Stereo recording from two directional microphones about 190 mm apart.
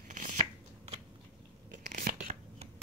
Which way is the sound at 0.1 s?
45° right (ahead or behind).